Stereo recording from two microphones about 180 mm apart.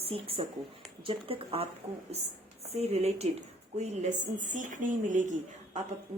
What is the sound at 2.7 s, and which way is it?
A woman's voice, 35° right (ahead or behind).